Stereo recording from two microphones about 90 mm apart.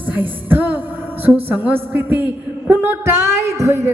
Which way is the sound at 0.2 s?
20° right (ahead or behind).